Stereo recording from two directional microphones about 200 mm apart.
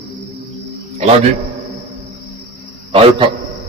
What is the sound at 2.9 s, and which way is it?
Speech, 30° right (ahead or behind).